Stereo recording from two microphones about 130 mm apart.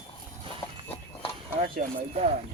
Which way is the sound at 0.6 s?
20° left (ahead or behind).